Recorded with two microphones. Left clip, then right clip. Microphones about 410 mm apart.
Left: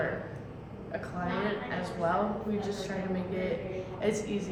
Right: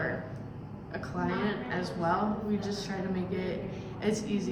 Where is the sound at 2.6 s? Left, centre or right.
Centre.